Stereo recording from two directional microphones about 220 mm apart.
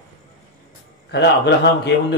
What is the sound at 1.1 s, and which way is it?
A man's voice, 50° left (ahead or behind).